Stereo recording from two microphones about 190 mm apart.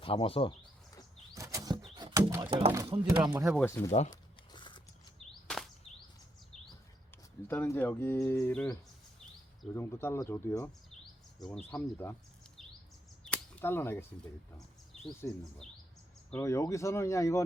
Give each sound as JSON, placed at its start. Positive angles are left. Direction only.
{"t": 0.0, "sound": "speech", "side_deg": 30}
{"t": 1.3, "sound": "bird flight", "side_deg": -15}
{"t": 2.0, "sound": "a sound", "side_deg": -20}
{"t": 2.5, "sound": "speech", "side_deg": -30}
{"t": 3.4, "sound": "speech", "side_deg": 5}
{"t": 4.1, "sound": "crumpling", "side_deg": 25}
{"t": 5.2, "sound": "a sound", "side_deg": 0}
{"t": 7.4, "sound": "speech", "side_deg": 10}
{"t": 9.7, "sound": "speech", "side_deg": 15}
{"t": 11.0, "sound": "chirp", "side_deg": 0}
{"t": 11.7, "sound": "speech", "side_deg": 15}
{"t": 13.2, "sound": "a sound", "side_deg": 10}
{"t": 15.2, "sound": "speech", "side_deg": 10}